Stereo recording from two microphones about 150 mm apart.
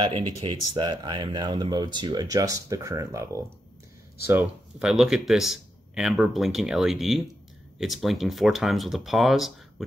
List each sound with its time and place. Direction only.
0.0 s speech: 30° right (ahead or behind)
4.7 s speech: 5° right (ahead or behind)